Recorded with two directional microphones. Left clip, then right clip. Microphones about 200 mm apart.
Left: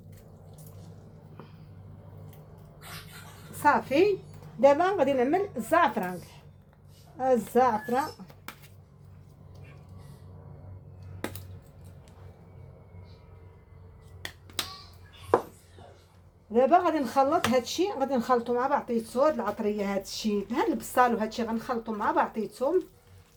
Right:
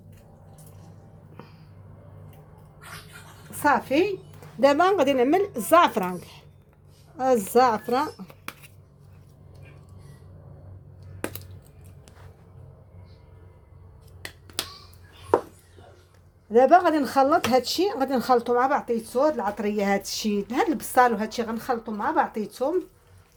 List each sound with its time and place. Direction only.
3.6 s speech: 50° right (ahead or behind)
16.5 s speech: 55° right (ahead or behind)